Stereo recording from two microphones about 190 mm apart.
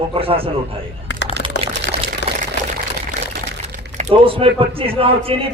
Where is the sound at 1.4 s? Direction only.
75° left (ahead or behind).